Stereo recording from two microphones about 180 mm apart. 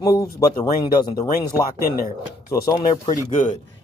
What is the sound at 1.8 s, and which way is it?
Speech, 55° left (ahead or behind).